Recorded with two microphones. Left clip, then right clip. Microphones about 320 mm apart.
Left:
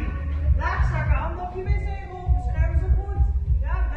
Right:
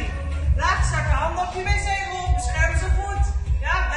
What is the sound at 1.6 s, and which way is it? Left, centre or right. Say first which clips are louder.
Music: right 12 dB; right.